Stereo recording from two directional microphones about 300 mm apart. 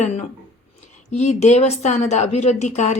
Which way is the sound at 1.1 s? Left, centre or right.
Left.